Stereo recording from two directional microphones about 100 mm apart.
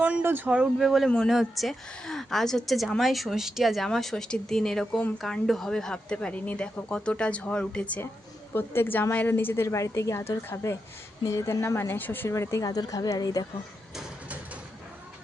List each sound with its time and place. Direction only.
0.0 s speech: 15° right (ahead or behind)
0.5 s a woman's voice: 5° right (ahead or behind); by 13.4 s 40° left (ahead or behind)